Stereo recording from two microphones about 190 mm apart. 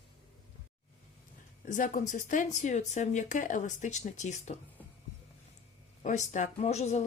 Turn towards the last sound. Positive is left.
turn(degrees=35)  # may be behind; listen again after turning